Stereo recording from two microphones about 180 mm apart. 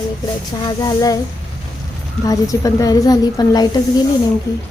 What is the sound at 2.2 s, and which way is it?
A woman's voice, 20° left (ahead or behind).